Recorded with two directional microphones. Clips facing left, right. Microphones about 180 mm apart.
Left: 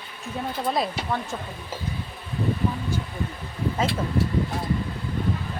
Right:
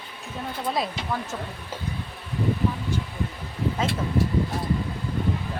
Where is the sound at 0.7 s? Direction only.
Centre (ahead or behind).